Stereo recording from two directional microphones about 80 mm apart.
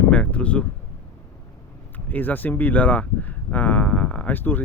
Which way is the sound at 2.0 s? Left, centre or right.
Left.